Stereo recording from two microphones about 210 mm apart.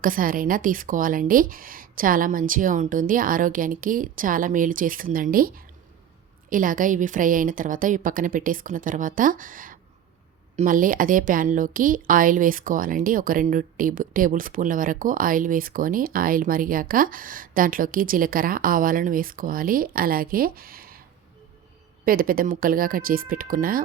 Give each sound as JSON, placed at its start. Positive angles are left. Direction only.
{"t": 0.0, "sound": "a woman's voice", "side_deg": -40}
{"t": 22.0, "sound": "speech", "side_deg": -45}